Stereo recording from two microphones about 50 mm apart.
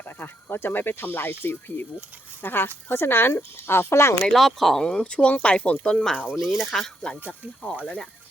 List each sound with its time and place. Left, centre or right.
0.0 s speech: left
4.2 s speech: centre
4.8 s speech: centre
6.3 s speech: centre
6.7 s speech: centre